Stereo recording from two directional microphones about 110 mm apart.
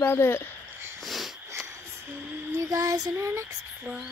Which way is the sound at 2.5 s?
30° right (ahead or behind).